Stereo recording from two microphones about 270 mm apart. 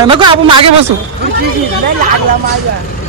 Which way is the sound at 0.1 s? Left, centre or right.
Centre.